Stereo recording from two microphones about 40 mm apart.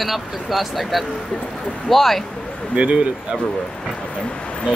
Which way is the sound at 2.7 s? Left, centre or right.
Right.